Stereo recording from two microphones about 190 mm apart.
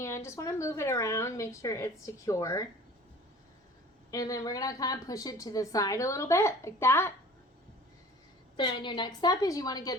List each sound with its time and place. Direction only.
0.0 s a woman's voice: 15° left (ahead or behind)
4.1 s a woman's voice: 20° left (ahead or behind)
8.5 s a woman's voice: 25° left (ahead or behind)